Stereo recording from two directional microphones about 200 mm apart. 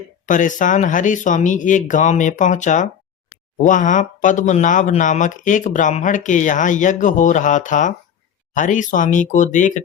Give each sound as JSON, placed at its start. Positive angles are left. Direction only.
{"t": 0.3, "sound": "speech", "side_deg": 40}